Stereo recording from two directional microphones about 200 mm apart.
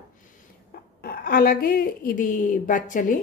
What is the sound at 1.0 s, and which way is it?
Speech, 50° left (ahead or behind).